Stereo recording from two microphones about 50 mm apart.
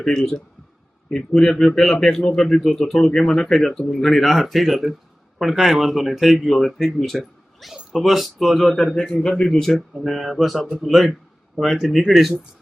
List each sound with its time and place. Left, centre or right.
0.0 s a man's voice: centre
7.2 s a sound: centre
7.9 s a man's voice: centre